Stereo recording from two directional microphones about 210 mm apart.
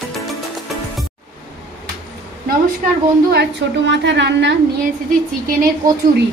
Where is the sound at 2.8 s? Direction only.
35° right (ahead or behind).